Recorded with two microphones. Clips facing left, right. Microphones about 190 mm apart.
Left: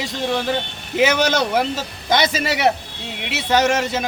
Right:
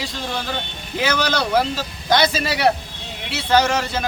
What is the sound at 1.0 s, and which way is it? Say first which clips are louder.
Speech: left 3 dB; 20° left (ahead or behind).